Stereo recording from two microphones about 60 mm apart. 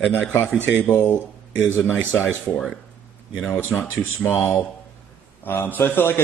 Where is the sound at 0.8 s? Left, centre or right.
Left.